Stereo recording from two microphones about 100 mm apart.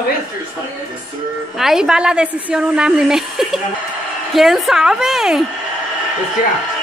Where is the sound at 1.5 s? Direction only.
5° right (ahead or behind).